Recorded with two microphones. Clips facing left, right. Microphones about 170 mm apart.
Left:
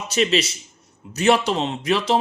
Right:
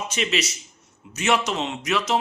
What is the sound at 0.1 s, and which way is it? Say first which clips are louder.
Speech: left 9 dB; 35° left (ahead or behind).